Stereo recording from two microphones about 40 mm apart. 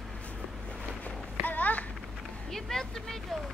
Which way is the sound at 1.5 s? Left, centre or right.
Left.